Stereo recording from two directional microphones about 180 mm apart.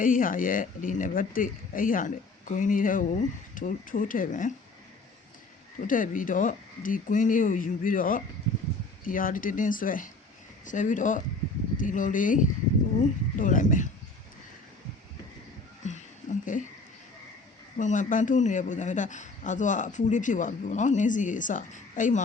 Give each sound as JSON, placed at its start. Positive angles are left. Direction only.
{"t": 0.0, "sound": "speech", "side_deg": 50}
{"t": 5.9, "sound": "speech", "side_deg": 50}
{"t": 15.8, "sound": "a sound", "side_deg": 40}
{"t": 17.7, "sound": "speech", "side_deg": 45}